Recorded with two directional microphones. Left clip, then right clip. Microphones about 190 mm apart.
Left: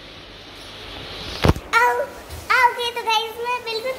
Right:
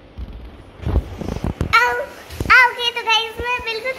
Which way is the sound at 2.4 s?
10° left (ahead or behind).